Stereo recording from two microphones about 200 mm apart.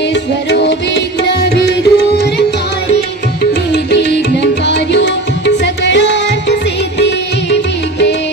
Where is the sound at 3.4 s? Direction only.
60° left (ahead or behind).